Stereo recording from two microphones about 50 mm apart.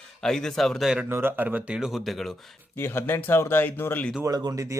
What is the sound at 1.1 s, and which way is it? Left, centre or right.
Speech, right.